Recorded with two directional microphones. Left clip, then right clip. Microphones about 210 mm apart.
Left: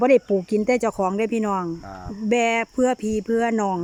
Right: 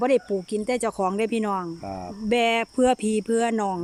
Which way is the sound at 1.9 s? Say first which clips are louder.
Right 3 dB; 20° right (ahead or behind).